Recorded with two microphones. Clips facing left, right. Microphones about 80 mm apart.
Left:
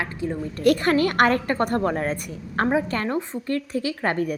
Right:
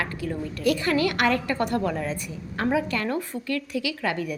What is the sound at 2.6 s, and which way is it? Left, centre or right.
Speech, left.